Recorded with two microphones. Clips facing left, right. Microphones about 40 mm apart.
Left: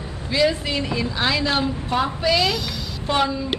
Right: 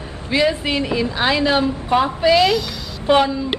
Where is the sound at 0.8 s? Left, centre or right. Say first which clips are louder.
Right 3 dB; centre.